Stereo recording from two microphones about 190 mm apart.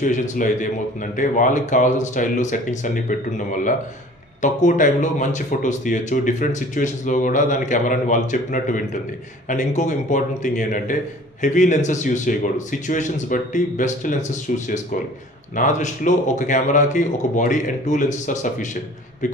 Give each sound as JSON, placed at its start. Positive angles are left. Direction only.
{"t": 0.0, "sound": "speech", "side_deg": 45}